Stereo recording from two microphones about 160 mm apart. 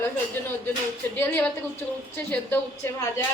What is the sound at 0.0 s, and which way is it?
A woman's voice, 10° left (ahead or behind).